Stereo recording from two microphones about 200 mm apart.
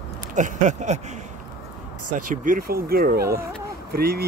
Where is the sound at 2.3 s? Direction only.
45° right (ahead or behind).